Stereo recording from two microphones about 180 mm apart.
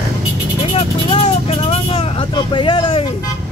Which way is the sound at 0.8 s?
35° left (ahead or behind).